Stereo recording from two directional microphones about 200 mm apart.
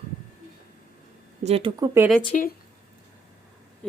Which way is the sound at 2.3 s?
40° left (ahead or behind).